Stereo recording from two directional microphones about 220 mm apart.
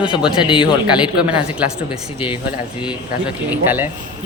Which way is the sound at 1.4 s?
5° right (ahead or behind).